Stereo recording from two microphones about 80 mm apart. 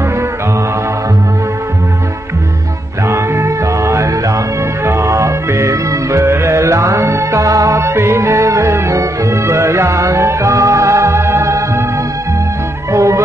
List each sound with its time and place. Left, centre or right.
3.1 s music: right
12.9 s music: right